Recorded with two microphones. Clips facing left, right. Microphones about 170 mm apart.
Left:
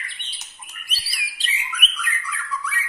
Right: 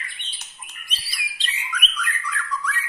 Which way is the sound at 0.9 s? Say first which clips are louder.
Even; 5° left (ahead or behind).